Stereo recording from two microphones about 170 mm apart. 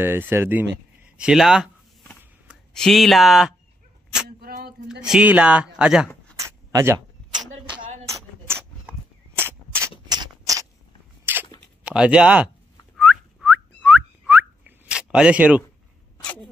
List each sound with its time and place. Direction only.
0.0 s speech: 15° right (ahead or behind)
2.7 s speech: centre (ahead or behind)
4.4 s a sound: 65° right (ahead or behind)
5.0 s speech: 5° right (ahead or behind)
6.3 s a sound: 15° right (ahead or behind)
8.1 s a sound: 15° right (ahead or behind)
11.3 s crunch: 10° right (ahead or behind)
11.8 s speech: 5° right (ahead or behind)
12.9 s whistling: 5° right (ahead or behind)
16.2 s sneeze: 5° left (ahead or behind)